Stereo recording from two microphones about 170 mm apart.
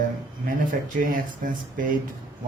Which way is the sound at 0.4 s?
55° right (ahead or behind).